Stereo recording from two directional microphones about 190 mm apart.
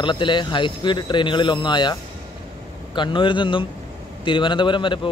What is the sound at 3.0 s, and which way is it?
A man's voice, 25° left (ahead or behind).